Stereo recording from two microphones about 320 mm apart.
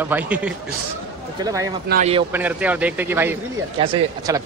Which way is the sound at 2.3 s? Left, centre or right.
Centre.